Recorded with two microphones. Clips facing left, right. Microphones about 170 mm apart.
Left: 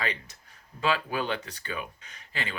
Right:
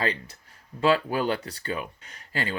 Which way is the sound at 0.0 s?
35° right (ahead or behind).